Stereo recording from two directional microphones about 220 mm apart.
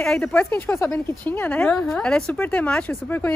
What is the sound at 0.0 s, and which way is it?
A woman's voice, 5° left (ahead or behind).